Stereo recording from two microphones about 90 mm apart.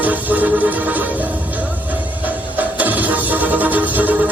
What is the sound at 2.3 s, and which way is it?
Music, 20° right (ahead or behind).